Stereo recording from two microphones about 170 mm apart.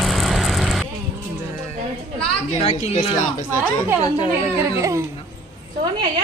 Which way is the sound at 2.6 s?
35° left (ahead or behind).